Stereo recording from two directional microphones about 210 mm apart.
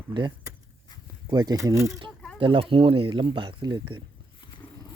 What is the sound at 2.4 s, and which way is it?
Speech, 25° right (ahead or behind).